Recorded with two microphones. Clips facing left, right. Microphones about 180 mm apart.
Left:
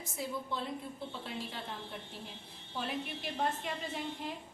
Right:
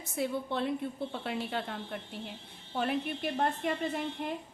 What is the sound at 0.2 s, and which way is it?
A woman's voice, 65° right (ahead or behind).